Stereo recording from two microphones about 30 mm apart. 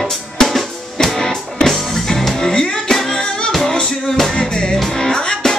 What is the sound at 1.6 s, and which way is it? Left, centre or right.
Music, centre.